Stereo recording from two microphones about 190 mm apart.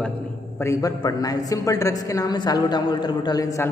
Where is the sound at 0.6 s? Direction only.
15° left (ahead or behind).